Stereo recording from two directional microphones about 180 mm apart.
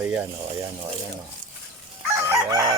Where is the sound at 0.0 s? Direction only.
10° right (ahead or behind).